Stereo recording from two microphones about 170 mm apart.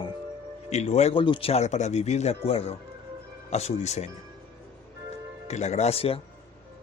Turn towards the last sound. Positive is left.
turn(degrees=35)  # may be behind; listen again after turning